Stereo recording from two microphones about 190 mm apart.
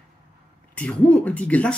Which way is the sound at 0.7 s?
5° left (ahead or behind).